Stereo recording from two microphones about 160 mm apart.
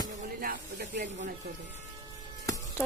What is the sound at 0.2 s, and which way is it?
Snake, 65° right (ahead or behind).